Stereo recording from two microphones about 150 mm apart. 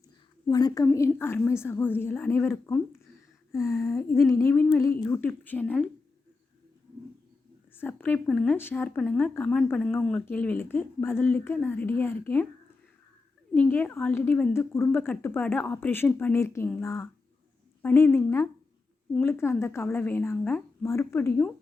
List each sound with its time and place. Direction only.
0.5 s humming: 25° left (ahead or behind)
0.9 s speech: 15° left (ahead or behind)
3.5 s humming: 20° left (ahead or behind)
5.0 s speech: 20° left (ahead or behind)
7.8 s speech: 10° left (ahead or behind)
13.5 s speech: 10° left (ahead or behind)
16.8 s humming: 20° left (ahead or behind)
17.8 s speech: 15° left (ahead or behind)